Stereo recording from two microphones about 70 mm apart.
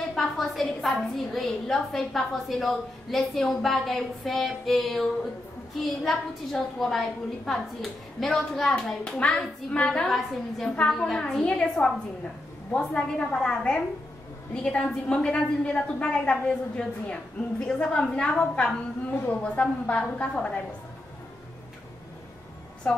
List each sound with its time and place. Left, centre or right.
0.1 s a woman's voice: centre
10.0 s a woman's voice: centre
22.8 s a woman's voice: centre